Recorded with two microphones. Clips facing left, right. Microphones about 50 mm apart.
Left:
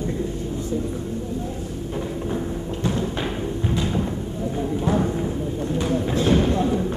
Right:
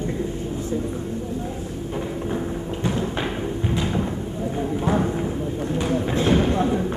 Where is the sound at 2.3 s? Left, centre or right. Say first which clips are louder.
Even; centre.